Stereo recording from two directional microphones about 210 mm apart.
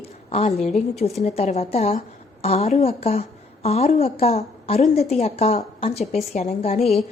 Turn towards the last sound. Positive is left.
turn(degrees=30)  # may be behind; listen again after turning